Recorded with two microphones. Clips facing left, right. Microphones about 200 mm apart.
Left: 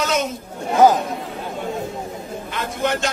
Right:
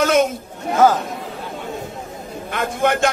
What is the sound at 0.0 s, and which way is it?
Chatter, 50° right (ahead or behind).